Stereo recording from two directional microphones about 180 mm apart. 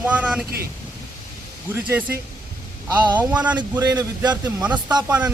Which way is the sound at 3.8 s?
20° right (ahead or behind).